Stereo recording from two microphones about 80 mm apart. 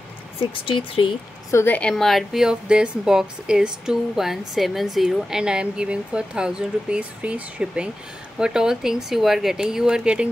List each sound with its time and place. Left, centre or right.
0.7 s speech: left
1.7 s a woman's voice: centre
2.0 s speech: centre